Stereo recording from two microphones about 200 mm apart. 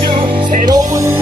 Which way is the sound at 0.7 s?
20° right (ahead or behind).